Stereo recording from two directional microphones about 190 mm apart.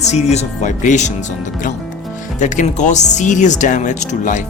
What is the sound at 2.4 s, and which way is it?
Speech, 40° left (ahead or behind).